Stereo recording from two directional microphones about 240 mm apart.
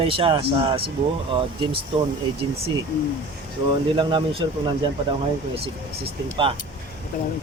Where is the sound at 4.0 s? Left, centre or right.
Right.